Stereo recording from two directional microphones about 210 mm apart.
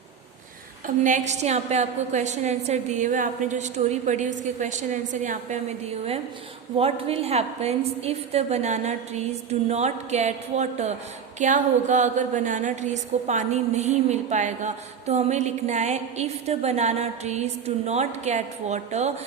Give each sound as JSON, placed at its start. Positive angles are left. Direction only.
{"t": 1.0, "sound": "a woman's voice", "side_deg": -35}